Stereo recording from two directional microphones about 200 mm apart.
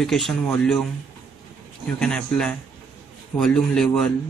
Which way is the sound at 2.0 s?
5° left (ahead or behind).